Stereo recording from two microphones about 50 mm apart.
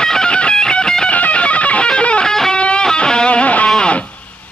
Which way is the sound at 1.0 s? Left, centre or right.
Left.